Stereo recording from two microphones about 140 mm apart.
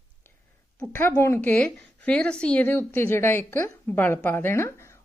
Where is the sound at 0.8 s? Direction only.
15° left (ahead or behind).